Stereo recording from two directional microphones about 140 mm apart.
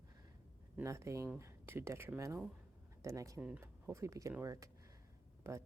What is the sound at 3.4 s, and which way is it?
Speech, 10° right (ahead or behind).